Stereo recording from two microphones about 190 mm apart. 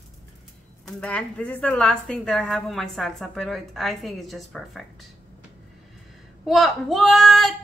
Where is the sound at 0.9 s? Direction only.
5° left (ahead or behind).